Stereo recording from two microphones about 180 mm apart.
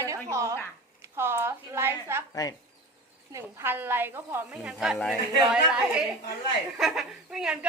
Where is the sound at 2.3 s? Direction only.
20° left (ahead or behind).